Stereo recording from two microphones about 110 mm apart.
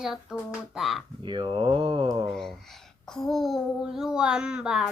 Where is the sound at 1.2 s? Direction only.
45° right (ahead or behind).